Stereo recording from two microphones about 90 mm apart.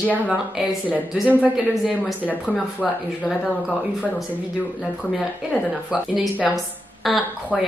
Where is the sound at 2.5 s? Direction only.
20° left (ahead or behind).